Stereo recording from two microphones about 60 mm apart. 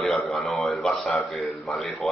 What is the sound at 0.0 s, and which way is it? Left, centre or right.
A man's voice, centre.